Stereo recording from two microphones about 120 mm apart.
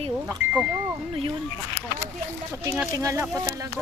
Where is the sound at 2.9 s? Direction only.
25° right (ahead or behind).